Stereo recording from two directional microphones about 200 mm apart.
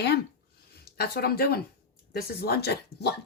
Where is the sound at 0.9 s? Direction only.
50° left (ahead or behind).